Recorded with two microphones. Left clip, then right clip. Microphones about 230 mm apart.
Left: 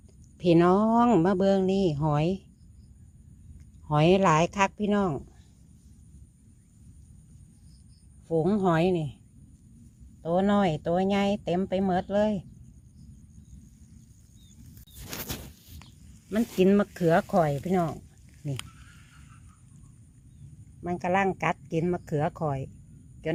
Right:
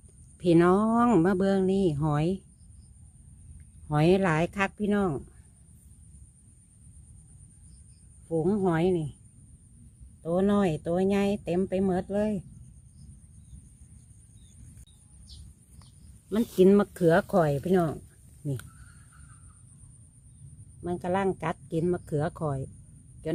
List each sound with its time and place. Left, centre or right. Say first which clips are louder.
0.3 s speech: left 1 dB; centre
3.8 s speech: left 3 dB; centre
8.3 s speech: left 2 dB; centre
10.2 s speech: left 1 dB; centre
16.9 s speech: right 1 dB; centre
20.8 s speech: left 2 dB; centre